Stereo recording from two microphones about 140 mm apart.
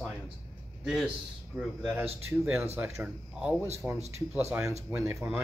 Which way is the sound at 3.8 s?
15° right (ahead or behind).